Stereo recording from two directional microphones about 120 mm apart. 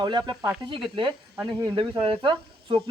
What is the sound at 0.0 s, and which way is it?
A man's voice, 40° right (ahead or behind).